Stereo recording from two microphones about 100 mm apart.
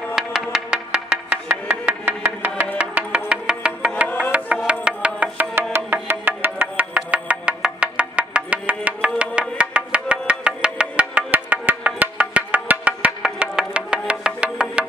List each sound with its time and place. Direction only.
0.1 s music: 5° right (ahead or behind)